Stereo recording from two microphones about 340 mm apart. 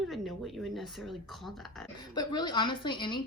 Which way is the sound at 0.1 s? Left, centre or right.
Centre.